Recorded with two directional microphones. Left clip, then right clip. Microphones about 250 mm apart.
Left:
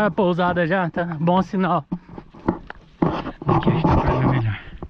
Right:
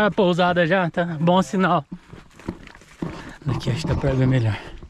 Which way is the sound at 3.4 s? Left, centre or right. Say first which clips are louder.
Left 9 dB; centre.